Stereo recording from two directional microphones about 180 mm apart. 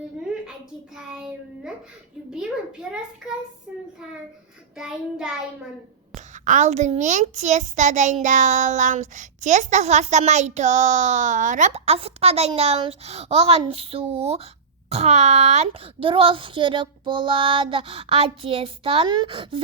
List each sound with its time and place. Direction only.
0.9 s a child's voice: 5° right (ahead or behind)
2.9 s a child's voice: 5° right (ahead or behind)
6.1 s a child's voice: 45° right (ahead or behind)